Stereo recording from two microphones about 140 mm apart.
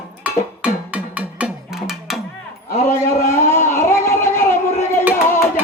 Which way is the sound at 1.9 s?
Centre (ahead or behind).